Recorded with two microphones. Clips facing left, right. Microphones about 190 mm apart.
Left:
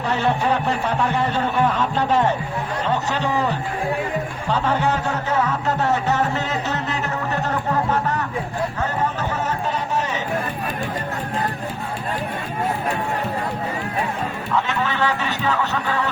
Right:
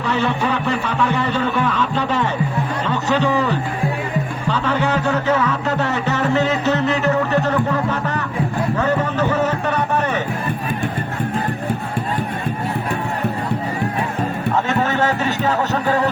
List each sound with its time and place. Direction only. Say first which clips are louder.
0.0 s music: right 1 dB; 90° right; by 10.2 s 60° right (ahead or behind)
14.5 s music: right 3 dB; 45° right (ahead or behind)